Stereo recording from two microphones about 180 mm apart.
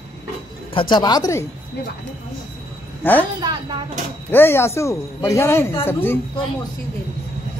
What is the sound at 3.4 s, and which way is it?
Speech, 25° right (ahead or behind).